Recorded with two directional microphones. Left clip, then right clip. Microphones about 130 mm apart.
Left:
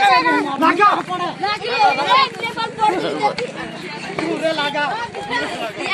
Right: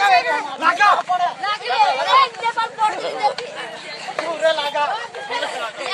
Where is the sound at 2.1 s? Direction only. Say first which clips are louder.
Even; 45° right (ahead or behind).